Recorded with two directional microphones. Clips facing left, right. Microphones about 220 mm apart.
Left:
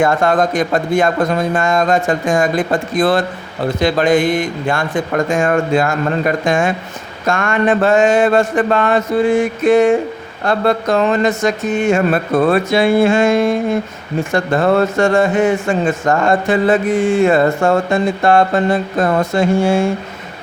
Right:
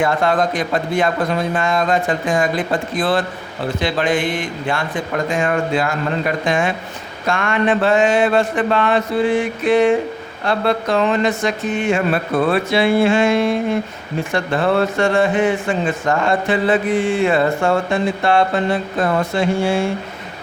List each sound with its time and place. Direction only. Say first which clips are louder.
0.0 s a man's voice: left 3 dB; 45° left (ahead or behind)